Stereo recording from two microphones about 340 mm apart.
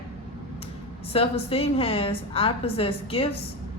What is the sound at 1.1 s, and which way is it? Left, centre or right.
Speech, centre.